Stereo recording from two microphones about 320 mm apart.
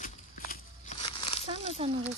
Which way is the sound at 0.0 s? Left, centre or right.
Left.